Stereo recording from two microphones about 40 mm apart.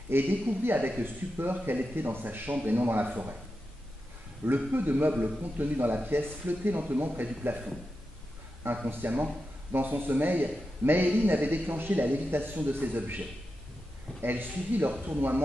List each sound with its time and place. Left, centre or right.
0.1 s a man's voice: right
4.5 s a man's voice: right
6.8 s speech: right
8.6 s speech: right
9.0 s a man's voice: right
12.5 s speech: right
14.2 s speech: right